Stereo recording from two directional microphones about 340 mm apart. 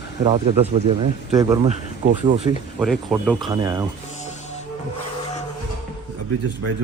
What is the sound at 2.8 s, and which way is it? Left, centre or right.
Speech, centre.